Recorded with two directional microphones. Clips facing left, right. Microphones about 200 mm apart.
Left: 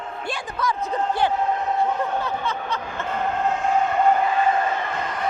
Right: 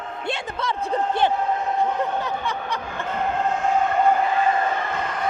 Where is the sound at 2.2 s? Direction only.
15° right (ahead or behind).